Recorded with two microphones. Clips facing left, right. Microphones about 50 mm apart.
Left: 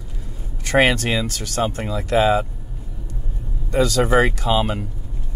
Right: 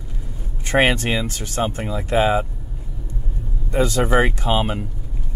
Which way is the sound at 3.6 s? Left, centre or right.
Right.